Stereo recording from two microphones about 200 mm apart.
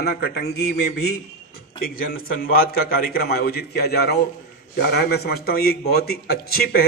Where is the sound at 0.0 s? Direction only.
55° left (ahead or behind).